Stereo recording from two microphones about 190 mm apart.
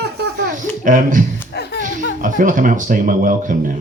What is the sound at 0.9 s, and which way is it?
Speech, 45° right (ahead or behind).